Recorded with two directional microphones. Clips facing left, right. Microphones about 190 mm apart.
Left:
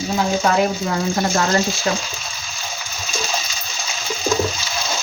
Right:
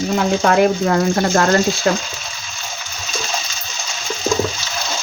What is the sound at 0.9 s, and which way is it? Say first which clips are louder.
Speech: right 4 dB; 60° right (ahead or behind).